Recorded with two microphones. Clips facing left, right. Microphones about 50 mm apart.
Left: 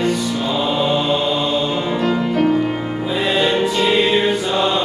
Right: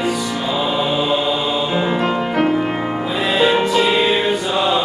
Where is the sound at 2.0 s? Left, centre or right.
Right.